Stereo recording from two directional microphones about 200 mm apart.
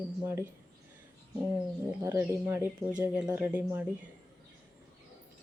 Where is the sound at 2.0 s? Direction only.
15° right (ahead or behind).